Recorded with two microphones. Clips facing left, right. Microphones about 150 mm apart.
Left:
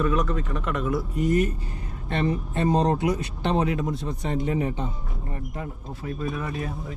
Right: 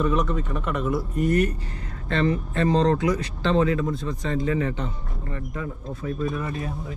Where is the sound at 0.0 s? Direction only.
Centre (ahead or behind).